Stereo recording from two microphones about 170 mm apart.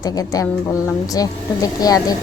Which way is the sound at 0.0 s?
20° left (ahead or behind).